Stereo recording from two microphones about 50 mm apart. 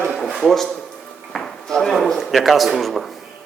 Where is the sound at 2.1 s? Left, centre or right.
Centre.